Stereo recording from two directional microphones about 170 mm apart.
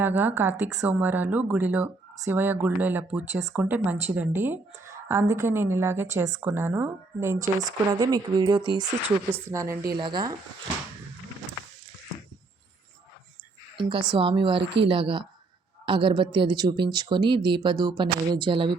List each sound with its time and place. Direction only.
0.0 s a woman's voice: 10° right (ahead or behind)
13.7 s speech: 30° right (ahead or behind)
14.6 s speech: 90° right
14.8 s a woman's voice: 30° right (ahead or behind)